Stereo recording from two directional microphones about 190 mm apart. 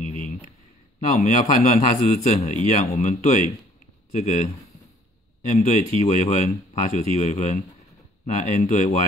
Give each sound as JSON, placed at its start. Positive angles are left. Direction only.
{"t": 1.1, "sound": "speech", "side_deg": 40}